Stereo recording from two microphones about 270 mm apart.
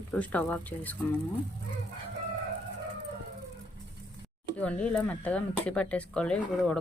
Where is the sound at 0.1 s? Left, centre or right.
Centre.